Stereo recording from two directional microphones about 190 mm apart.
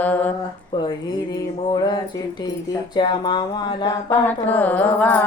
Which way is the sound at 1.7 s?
20° left (ahead or behind).